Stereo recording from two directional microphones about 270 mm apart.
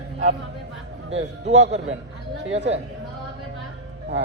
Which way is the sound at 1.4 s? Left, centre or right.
Right.